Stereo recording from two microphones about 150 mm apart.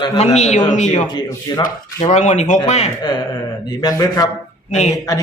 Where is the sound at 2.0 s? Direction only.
50° left (ahead or behind).